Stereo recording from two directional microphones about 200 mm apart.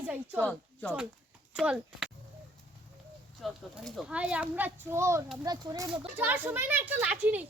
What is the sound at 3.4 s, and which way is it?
A child's voice, centre (ahead or behind).